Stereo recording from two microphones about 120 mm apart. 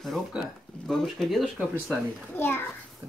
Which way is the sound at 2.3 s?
15° left (ahead or behind).